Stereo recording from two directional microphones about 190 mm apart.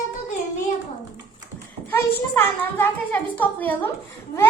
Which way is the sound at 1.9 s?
10° left (ahead or behind).